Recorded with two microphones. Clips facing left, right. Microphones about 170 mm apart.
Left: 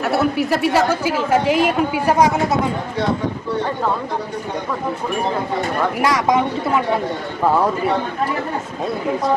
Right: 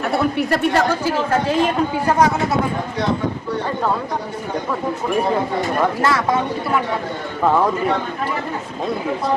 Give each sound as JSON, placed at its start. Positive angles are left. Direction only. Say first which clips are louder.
{"t": 0.0, "sound": "a woman's voice", "louder": "left 1 dB", "side_deg": 5}
{"t": 6.0, "sound": "a woman's voice", "louder": "left 2 dB", "side_deg": 15}